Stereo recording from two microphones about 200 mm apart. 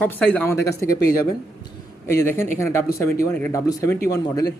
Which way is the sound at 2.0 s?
15° left (ahead or behind).